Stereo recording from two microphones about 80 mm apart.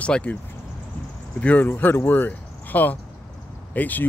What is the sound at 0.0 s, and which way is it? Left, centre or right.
Speech, centre.